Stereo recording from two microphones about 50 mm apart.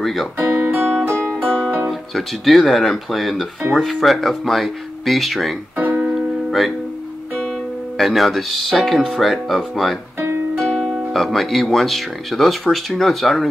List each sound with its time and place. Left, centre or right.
0.0 s speech: centre
0.4 s music: right
1.4 s music: centre
1.9 s speech: centre
5.8 s music: right
6.1 s music: centre
8.0 s speech: centre